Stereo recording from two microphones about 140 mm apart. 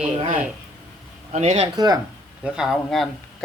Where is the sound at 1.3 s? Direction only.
50° right (ahead or behind).